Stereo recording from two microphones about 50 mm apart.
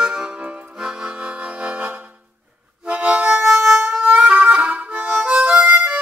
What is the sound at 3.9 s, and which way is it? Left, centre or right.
Harmonica, centre.